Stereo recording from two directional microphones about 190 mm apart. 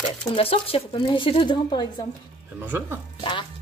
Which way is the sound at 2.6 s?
10° right (ahead or behind).